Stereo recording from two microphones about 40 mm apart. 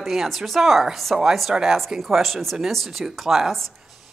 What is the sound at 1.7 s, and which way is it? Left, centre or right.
Speech, centre.